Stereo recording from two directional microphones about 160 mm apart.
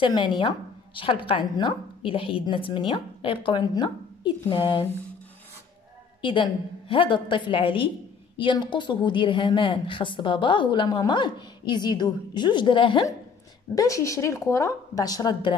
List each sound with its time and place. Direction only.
0.0 s a woman's voice: 30° left (ahead or behind)
6.2 s a woman's voice: 30° left (ahead or behind)
13.7 s a woman's voice: 20° left (ahead or behind)